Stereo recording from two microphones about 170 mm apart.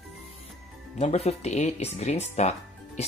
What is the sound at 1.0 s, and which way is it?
Speech, 40° left (ahead or behind).